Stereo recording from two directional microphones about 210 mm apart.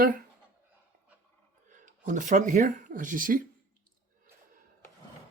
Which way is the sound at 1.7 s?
35° right (ahead or behind).